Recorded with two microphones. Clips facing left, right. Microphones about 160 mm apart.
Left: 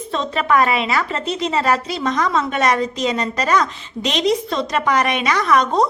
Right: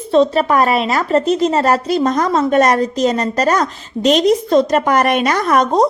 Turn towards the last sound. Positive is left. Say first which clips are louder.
# right 3 dB
turn(degrees=-45)  # may be behind; listen again after turning